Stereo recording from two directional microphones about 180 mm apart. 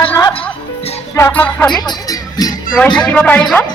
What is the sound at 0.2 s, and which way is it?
Music, 25° left (ahead or behind).